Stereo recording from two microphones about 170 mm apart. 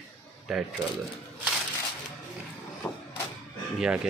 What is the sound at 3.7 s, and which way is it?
Speech, 5° right (ahead or behind).